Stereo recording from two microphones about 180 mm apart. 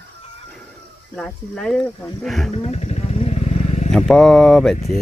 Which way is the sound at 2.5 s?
35° left (ahead or behind).